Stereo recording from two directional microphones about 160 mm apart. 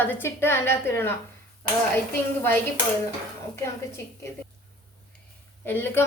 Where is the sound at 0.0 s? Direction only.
15° left (ahead or behind).